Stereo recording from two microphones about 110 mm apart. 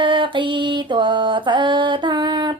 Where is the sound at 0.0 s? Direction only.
45° right (ahead or behind).